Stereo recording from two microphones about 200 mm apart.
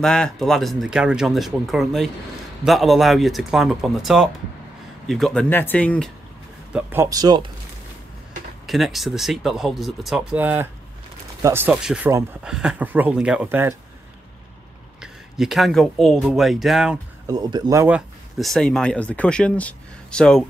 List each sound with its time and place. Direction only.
0.0 s speech: 5° left (ahead or behind)
6.7 s speech: 10° right (ahead or behind)
8.6 s speech: centre (ahead or behind)
15.0 s speech: centre (ahead or behind)
17.3 s speech: 20° right (ahead or behind); by 20.4 s 5° left (ahead or behind)